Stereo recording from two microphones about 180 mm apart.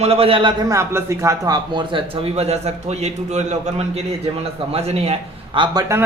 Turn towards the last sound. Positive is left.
turn(degrees=-20)  # may be behind; listen again after turning